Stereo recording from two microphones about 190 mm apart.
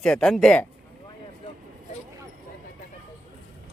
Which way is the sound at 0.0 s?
5° left (ahead or behind).